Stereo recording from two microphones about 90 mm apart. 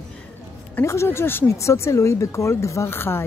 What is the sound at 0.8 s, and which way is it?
Speech, 30° left (ahead or behind).